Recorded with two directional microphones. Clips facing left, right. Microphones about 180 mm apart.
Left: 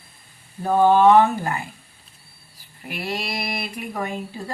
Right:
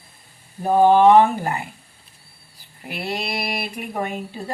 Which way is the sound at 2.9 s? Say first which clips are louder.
Right 1 dB; 30° right (ahead or behind).